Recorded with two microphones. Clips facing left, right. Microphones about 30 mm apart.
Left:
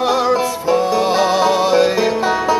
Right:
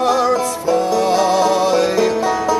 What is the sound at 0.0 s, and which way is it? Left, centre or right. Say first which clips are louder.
Music: even; centre.